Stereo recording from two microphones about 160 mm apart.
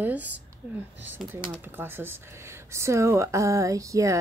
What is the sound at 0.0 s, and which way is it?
Speech, 10° right (ahead or behind).